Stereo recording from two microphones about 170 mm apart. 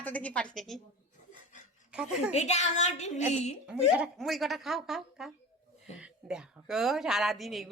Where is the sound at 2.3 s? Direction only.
40° left (ahead or behind).